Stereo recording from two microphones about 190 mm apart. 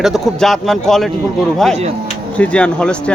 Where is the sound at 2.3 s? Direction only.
5° left (ahead or behind).